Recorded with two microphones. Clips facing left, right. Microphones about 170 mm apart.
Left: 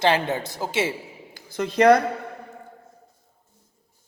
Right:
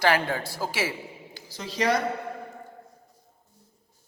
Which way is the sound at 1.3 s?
55° left (ahead or behind).